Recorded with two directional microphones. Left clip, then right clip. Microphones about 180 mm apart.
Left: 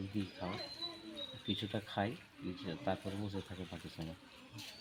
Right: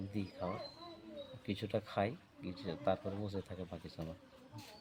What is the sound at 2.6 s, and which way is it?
Speech, 30° right (ahead or behind).